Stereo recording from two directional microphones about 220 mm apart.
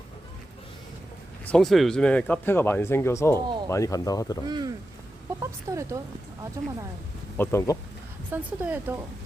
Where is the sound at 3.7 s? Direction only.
15° left (ahead or behind).